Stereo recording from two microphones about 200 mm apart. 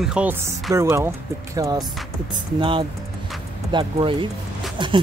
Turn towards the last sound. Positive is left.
turn(degrees=-25)  # may be behind; listen again after turning